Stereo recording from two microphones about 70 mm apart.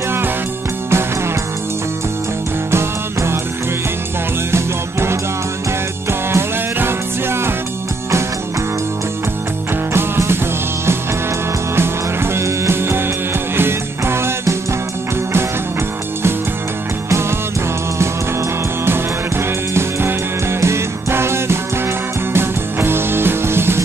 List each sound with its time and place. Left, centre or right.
2.7 s music: right
4.5 s music: right
9.9 s music: right
11.7 s music: right
17.1 s music: right